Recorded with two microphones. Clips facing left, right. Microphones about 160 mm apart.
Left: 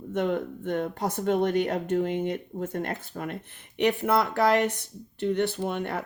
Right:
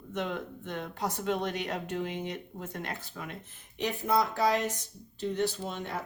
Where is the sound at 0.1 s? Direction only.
55° left (ahead or behind).